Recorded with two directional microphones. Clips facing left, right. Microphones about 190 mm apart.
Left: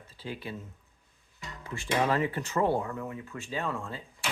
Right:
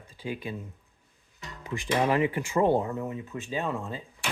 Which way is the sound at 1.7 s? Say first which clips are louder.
Right 2 dB; 15° right (ahead or behind).